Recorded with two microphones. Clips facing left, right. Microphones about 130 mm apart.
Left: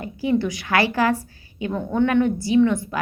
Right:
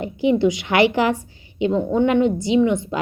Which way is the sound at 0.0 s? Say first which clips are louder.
Right 4 dB; 20° right (ahead or behind).